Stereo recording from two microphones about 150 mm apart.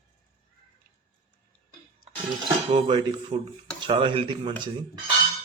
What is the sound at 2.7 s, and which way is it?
Speech, 30° right (ahead or behind).